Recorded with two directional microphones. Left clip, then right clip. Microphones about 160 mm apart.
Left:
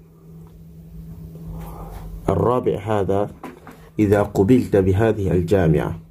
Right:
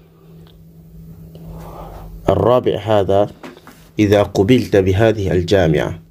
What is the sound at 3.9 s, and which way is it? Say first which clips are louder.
Speech: right 4 dB; 15° right (ahead or behind).